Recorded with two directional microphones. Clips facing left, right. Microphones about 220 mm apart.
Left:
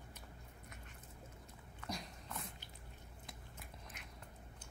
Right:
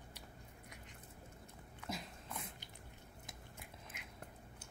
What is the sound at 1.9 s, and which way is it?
Dog, centre (ahead or behind).